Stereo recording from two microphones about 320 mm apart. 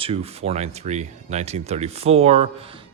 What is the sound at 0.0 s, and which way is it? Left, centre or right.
Speech, centre.